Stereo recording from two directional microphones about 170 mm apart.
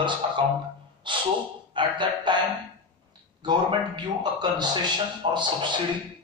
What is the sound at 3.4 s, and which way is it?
A man's voice, 25° right (ahead or behind).